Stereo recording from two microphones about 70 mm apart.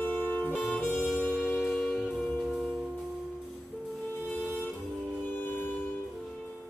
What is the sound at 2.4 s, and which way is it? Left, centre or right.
Music, centre.